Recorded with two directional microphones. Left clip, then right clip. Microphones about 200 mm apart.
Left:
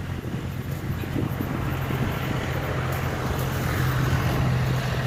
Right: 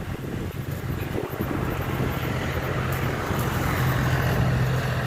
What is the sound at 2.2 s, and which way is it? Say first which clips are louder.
Vehicle: right 1 dB; 20° right (ahead or behind).